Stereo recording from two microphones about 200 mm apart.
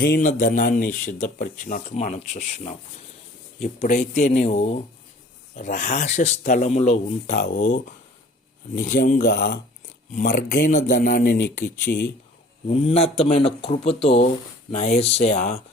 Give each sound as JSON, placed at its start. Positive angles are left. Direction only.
{"t": 0.0, "sound": "speech", "side_deg": 45}
{"t": 10.2, "sound": "speech", "side_deg": 40}
{"t": 12.6, "sound": "speech", "side_deg": 30}